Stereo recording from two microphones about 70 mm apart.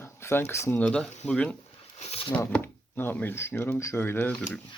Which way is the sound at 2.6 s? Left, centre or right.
Left.